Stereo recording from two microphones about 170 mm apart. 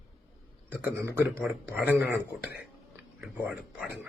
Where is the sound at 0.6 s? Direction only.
15° right (ahead or behind).